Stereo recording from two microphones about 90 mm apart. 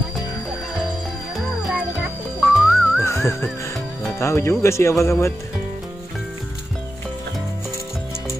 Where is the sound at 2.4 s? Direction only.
Centre (ahead or behind).